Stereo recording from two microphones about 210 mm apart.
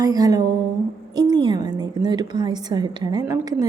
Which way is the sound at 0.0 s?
15° right (ahead or behind).